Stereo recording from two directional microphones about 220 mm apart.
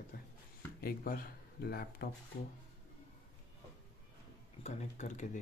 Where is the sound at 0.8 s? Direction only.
45° left (ahead or behind).